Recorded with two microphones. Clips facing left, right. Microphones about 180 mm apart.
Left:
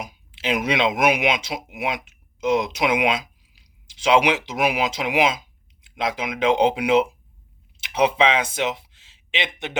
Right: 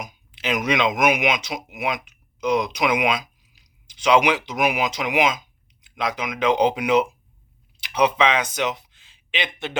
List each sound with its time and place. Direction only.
0.0 s speech: 30° left (ahead or behind)